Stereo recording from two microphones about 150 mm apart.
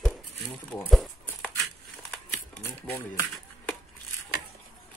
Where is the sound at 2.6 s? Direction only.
15° left (ahead or behind).